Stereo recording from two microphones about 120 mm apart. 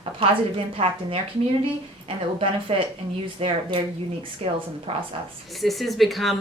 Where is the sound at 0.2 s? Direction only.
50° right (ahead or behind).